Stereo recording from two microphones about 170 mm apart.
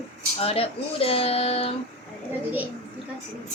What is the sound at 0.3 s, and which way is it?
Speech, 35° left (ahead or behind).